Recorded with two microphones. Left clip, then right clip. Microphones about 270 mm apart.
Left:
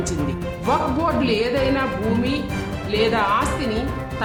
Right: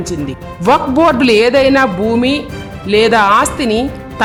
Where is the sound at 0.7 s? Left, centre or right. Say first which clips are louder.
Right 11 dB; right.